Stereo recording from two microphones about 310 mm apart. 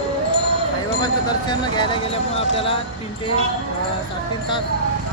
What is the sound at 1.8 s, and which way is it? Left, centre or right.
Speech, centre.